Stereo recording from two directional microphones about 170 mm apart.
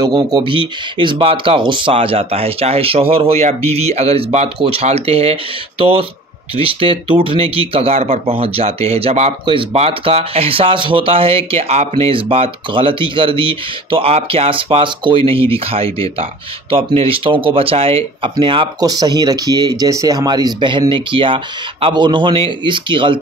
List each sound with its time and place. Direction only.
0.0 s speech: 25° right (ahead or behind)